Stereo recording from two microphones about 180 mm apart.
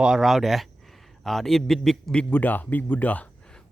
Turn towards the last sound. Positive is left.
turn(degrees=10)  # may be behind; listen again after turning